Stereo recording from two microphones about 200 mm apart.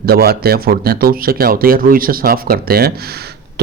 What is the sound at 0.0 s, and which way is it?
Speech, 50° right (ahead or behind).